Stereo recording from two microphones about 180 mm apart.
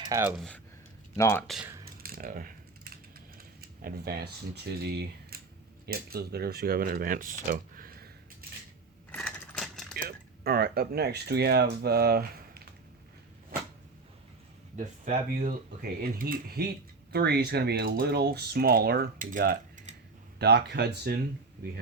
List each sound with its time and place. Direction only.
0.0 s speech: 15° right (ahead or behind)
0.3 s speech: 5° left (ahead or behind)
1.1 s speech: 15° left (ahead or behind)
1.5 s speech: centre (ahead or behind)
2.0 s typing: 55° right (ahead or behind)
5.8 s speech: 60° right (ahead or behind)
9.1 s a sound: 5° left (ahead or behind)
9.9 s speech: 60° right (ahead or behind)
15.8 s speech: 55° right (ahead or behind)
20.4 s speech: 65° right (ahead or behind)